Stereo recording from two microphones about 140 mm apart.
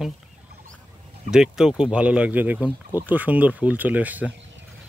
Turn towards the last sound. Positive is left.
turn(degrees=-10)  # may be behind; listen again after turning